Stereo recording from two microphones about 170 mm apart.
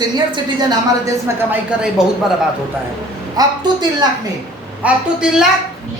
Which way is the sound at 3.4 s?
25° right (ahead or behind).